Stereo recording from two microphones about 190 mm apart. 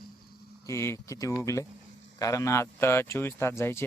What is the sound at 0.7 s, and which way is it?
Speech, 15° left (ahead or behind).